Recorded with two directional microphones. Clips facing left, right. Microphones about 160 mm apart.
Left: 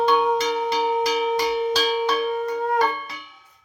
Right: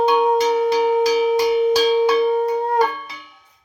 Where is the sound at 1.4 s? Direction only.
20° right (ahead or behind).